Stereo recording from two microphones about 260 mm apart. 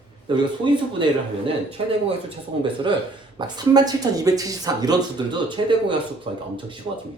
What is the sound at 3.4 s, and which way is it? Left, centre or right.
Speech, centre.